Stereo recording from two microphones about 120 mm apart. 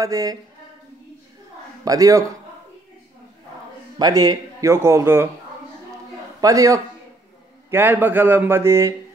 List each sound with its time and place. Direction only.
0.0 s speech: 30° right (ahead or behind)
1.9 s speech: 30° right (ahead or behind)
4.0 s speech: 30° right (ahead or behind)
6.4 s speech: 30° right (ahead or behind)
7.7 s speech: 15° right (ahead or behind)